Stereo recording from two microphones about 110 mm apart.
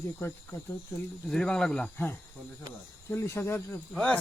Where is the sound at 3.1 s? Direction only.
25° left (ahead or behind).